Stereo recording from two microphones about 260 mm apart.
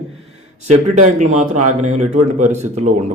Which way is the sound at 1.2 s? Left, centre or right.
Right.